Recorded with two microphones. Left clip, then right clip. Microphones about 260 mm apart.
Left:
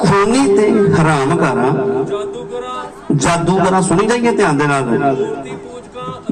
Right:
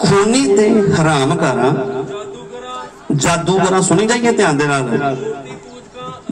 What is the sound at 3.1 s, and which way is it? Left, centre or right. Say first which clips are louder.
A man's voice: left 1 dB; right.